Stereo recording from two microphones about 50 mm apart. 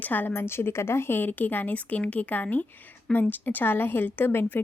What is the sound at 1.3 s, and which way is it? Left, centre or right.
A woman's voice, left.